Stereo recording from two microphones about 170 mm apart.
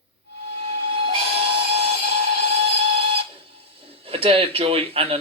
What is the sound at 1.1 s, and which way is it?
Steam whistle, 35° right (ahead or behind).